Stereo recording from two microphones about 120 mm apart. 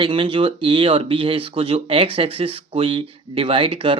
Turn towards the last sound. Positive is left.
turn(degrees=-45)  # may be behind; listen again after turning